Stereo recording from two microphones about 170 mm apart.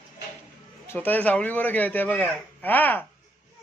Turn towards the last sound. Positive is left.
turn(degrees=10)  # may be behind; listen again after turning